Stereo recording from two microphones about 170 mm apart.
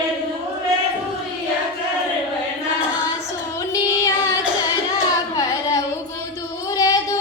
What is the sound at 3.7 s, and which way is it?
Child singing, 20° left (ahead or behind).